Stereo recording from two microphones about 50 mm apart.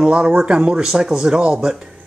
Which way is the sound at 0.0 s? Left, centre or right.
Right.